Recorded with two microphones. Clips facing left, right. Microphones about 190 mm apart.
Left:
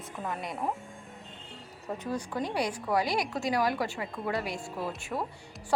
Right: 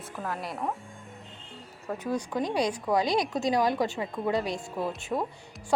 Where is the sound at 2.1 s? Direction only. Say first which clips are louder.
Right 4 dB; 15° right (ahead or behind).